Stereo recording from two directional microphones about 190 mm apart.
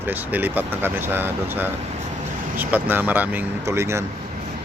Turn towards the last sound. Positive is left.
turn(degrees=-15)  # may be behind; listen again after turning